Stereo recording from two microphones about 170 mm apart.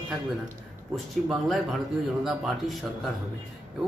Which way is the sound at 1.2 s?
Centre (ahead or behind).